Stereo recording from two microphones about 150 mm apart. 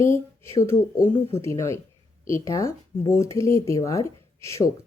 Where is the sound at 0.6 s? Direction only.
15° left (ahead or behind).